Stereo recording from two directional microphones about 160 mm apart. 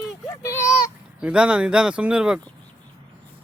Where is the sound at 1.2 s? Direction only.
5° right (ahead or behind).